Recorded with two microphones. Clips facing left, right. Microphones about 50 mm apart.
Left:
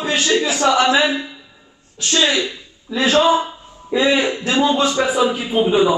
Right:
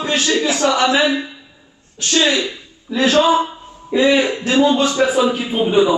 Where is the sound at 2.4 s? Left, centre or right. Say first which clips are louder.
Even; right.